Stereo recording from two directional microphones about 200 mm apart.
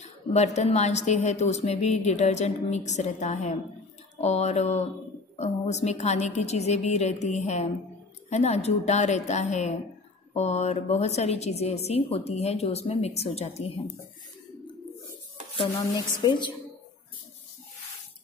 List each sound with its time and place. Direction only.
0.0 s a woman's voice: 35° left (ahead or behind)
16.2 s a woman's voice: 20° left (ahead or behind)